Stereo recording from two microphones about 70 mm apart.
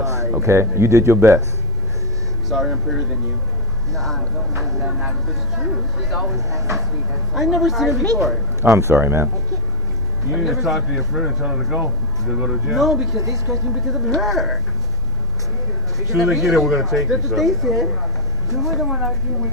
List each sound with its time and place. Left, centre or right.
0.0 s a sound: right
0.4 s speech: right
2.5 s speech: centre
6.5 s speech: right
7.3 s speech: centre
8.7 s speech: right
10.3 s speech: centre
13.2 s speech: right
13.8 s speech: centre
16.2 s speech: centre